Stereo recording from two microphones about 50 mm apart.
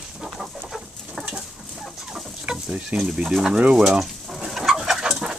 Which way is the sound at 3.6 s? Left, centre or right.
Centre.